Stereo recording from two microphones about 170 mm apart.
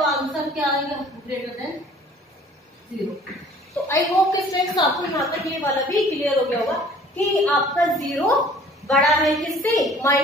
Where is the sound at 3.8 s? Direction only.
20° left (ahead or behind).